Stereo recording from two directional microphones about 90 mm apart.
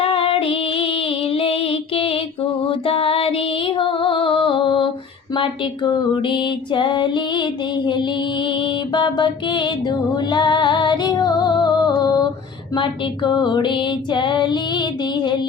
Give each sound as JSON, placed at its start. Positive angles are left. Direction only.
{"t": 0.0, "sound": "female singing", "side_deg": 90}
{"t": 2.6, "sound": "music", "side_deg": 85}
{"t": 5.3, "sound": "music", "side_deg": 60}